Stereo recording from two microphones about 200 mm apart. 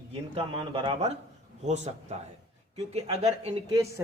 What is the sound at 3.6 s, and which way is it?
Speech, 15° right (ahead or behind).